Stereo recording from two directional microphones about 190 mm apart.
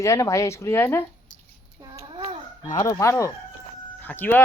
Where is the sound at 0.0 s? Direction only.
15° left (ahead or behind).